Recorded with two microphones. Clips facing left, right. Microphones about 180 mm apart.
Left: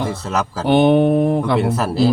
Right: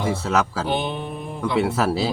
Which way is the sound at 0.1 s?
Centre (ahead or behind).